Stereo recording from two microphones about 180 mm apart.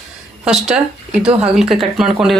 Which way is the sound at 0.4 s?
5° right (ahead or behind).